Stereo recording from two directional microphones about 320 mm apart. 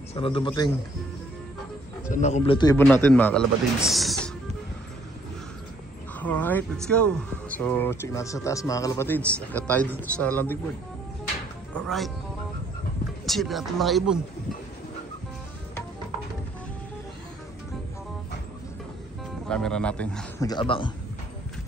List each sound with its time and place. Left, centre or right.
0.1 s a man's voice: centre
2.1 s speech: left; by 4.3 s centre
6.1 s speech: centre
11.7 s speech: centre
13.2 s speech: centre
19.4 s speech: centre